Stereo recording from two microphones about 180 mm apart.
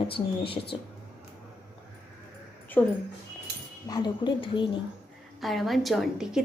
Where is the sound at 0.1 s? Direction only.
30° left (ahead or behind).